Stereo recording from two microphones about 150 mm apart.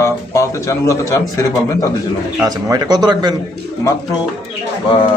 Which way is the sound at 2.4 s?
25° right (ahead or behind).